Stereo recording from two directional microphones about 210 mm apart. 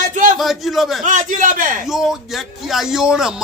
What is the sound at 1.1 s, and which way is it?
Speech, 40° right (ahead or behind).